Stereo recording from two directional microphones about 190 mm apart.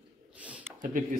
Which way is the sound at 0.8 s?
45° right (ahead or behind).